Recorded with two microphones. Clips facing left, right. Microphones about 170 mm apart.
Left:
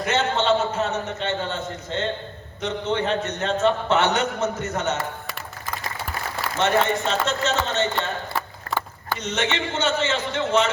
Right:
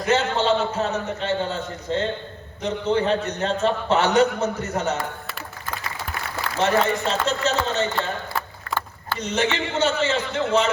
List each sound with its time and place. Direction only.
0.0 s a man's voice: 35° right (ahead or behind)
6.6 s a man's voice: 35° right (ahead or behind)
8.4 s a sound: 10° left (ahead or behind)
9.1 s a man's voice: 35° right (ahead or behind)